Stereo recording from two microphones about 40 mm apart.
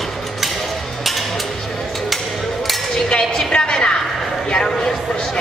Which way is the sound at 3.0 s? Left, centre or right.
Left.